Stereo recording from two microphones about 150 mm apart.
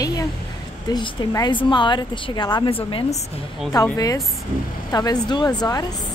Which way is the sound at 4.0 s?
25° left (ahead or behind).